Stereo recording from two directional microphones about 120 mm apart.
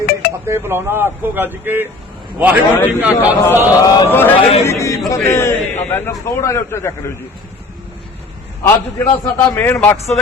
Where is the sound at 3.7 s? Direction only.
30° left (ahead or behind).